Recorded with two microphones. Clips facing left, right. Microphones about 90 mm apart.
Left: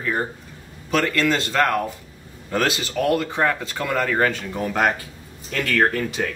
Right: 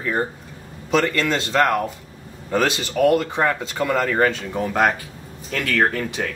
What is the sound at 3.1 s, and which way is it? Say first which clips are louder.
Speech: right 1 dB; 15° right (ahead or behind).